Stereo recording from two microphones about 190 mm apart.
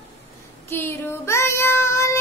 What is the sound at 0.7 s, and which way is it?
Child singing, 10° left (ahead or behind).